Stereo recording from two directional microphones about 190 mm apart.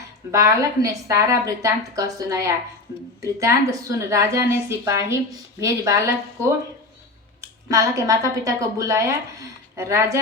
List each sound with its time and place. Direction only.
0.3 s a woman's voice: 15° right (ahead or behind)
7.7 s a woman's voice: 15° right (ahead or behind)